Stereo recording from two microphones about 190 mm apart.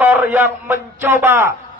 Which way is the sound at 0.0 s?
10° right (ahead or behind).